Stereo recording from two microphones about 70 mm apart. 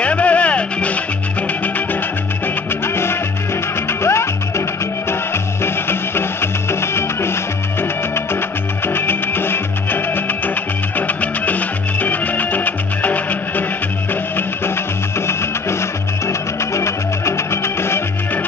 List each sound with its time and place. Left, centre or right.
0.0 s music: centre
4.0 s music: left
8.8 s music: left
15.1 s music: left